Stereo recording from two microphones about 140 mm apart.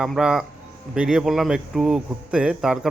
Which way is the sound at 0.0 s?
5° right (ahead or behind).